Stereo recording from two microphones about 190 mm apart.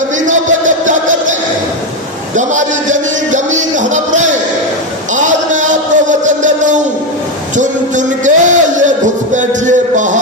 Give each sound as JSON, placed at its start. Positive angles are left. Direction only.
{"t": 0.3, "sound": "music", "side_deg": -40}
{"t": 5.1, "sound": "a sound", "side_deg": -40}
{"t": 7.5, "sound": "music", "side_deg": -40}